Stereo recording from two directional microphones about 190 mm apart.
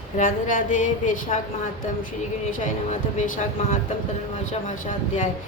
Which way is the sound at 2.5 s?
40° left (ahead or behind).